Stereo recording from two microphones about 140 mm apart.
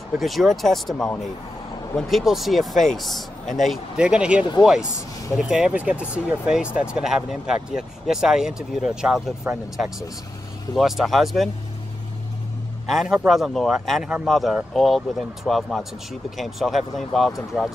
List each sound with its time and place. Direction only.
0.2 s speech: centre (ahead or behind)
3.4 s speech: 65° left (ahead or behind)
3.7 s speech: 5° right (ahead or behind)
9.5 s speech: 15° right (ahead or behind)
10.8 s speech: centre (ahead or behind)
12.9 s speech: 5° right (ahead or behind)